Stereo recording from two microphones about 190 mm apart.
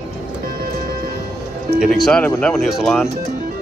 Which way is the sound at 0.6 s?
50° right (ahead or behind).